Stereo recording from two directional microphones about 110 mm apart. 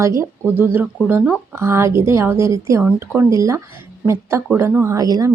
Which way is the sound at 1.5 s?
25° right (ahead or behind).